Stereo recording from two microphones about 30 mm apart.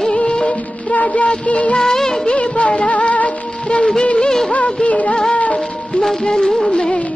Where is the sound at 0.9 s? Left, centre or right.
Left.